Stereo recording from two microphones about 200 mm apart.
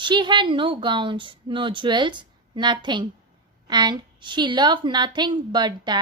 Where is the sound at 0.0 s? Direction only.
20° right (ahead or behind).